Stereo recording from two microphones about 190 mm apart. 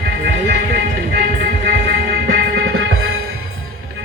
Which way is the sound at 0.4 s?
55° right (ahead or behind).